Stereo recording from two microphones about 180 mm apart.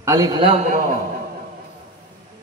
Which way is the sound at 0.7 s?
45° right (ahead or behind).